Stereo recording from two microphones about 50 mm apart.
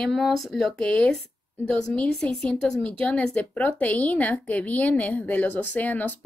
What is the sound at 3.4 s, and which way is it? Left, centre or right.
A woman's voice, left.